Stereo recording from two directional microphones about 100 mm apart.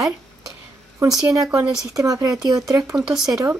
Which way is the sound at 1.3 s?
35° right (ahead or behind).